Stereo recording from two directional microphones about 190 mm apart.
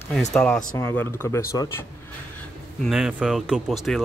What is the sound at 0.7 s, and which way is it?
Speech, 15° left (ahead or behind).